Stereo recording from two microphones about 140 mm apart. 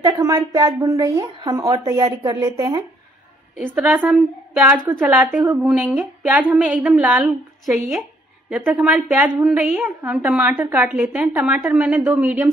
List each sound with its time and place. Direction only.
0.0 s speech: 25° right (ahead or behind)
3.5 s a woman's voice: 10° right (ahead or behind)